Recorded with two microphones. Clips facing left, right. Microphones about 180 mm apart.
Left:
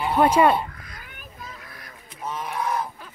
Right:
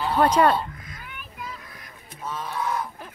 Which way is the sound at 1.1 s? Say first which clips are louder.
Right 5 dB; 40° left (ahead or behind).